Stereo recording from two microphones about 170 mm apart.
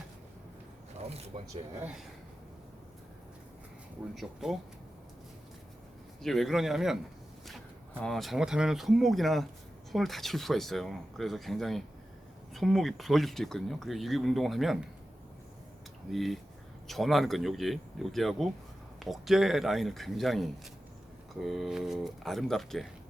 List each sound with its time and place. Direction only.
1.3 s speech: 45° right (ahead or behind)
4.1 s speech: centre (ahead or behind)
6.2 s speech: centre (ahead or behind)
8.0 s speech: centre (ahead or behind)
16.1 s speech: centre (ahead or behind)